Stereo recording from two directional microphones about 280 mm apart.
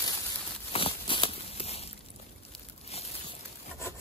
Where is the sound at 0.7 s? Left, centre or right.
Centre.